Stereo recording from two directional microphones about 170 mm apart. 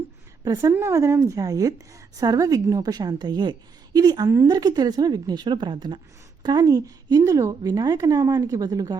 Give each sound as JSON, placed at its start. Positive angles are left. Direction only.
{"t": 0.4, "sound": "a woman's voice", "side_deg": -20}